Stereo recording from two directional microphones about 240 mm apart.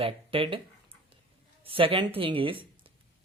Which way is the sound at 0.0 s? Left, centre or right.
Right.